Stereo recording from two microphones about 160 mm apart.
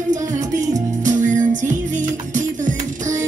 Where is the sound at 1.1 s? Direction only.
50° right (ahead or behind).